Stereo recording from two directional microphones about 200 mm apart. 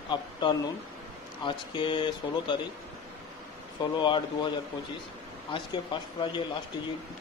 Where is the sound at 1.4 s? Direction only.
25° left (ahead or behind).